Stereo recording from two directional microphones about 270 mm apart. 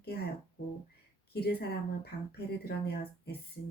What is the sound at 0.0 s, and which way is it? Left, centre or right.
Speech, left.